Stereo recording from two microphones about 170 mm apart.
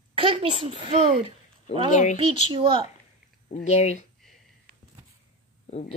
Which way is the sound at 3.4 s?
45° left (ahead or behind).